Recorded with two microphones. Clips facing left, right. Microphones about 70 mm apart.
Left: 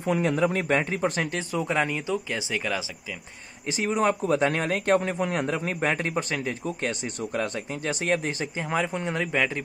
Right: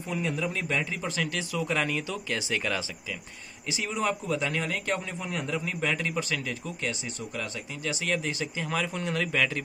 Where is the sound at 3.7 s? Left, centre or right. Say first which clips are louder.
Left 5 dB; left.